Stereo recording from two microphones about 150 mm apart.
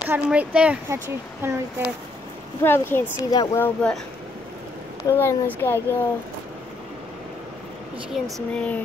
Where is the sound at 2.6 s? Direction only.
15° left (ahead or behind).